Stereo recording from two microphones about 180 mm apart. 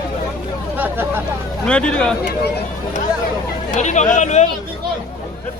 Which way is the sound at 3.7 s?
40° left (ahead or behind).